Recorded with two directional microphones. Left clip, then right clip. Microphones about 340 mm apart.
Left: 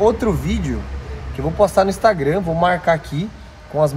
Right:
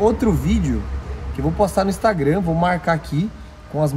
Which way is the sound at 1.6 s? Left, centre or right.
Centre.